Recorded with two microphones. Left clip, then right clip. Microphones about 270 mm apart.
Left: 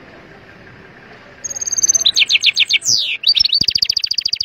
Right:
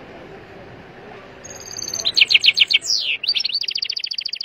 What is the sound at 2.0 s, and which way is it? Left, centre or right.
Chirp, centre.